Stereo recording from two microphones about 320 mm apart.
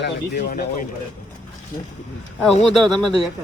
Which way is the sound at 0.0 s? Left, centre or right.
Left.